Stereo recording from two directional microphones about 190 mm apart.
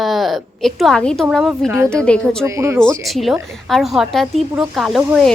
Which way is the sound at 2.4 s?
15° right (ahead or behind).